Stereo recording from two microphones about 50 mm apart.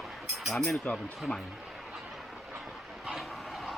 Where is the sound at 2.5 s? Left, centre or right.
Centre.